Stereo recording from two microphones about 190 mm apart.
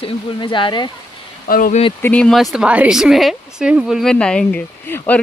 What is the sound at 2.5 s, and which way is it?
A woman's voice, 5° right (ahead or behind).